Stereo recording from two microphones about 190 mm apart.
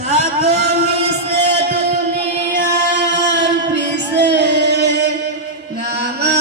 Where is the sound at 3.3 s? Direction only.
65° right (ahead or behind).